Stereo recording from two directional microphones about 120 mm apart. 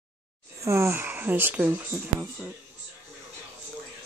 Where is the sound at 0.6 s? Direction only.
25° right (ahead or behind).